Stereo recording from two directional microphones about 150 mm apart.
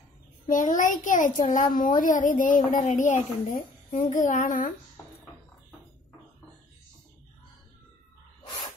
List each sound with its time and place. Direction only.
0.5 s a woman's voice: 60° left (ahead or behind)